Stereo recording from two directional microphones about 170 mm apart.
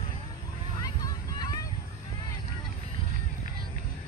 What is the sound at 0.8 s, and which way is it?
Vehicle, 25° left (ahead or behind).